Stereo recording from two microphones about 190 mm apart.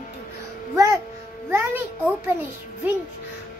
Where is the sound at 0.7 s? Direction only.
15° right (ahead or behind).